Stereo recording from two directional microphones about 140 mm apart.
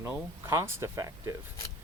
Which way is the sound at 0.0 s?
20° right (ahead or behind).